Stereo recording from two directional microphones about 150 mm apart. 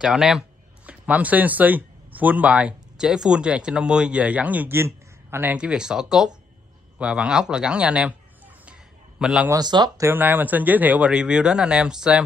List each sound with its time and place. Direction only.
0.0 s speech: 5° right (ahead or behind)
9.2 s speech: 5° right (ahead or behind)
9.5 s speech: 25° right (ahead or behind)
9.9 s speech: 15° right (ahead or behind)